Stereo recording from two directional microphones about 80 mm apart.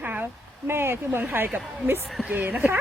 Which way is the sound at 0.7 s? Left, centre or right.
Right.